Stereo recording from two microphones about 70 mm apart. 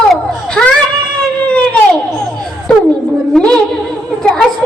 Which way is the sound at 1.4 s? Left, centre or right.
Centre.